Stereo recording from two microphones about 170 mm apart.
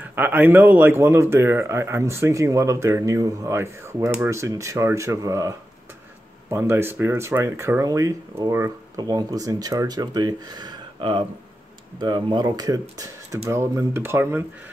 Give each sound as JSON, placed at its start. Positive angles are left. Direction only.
{"t": 0.0, "sound": "speech", "side_deg": -10}